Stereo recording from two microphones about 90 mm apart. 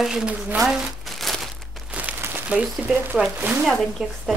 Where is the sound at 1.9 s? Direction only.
20° right (ahead or behind).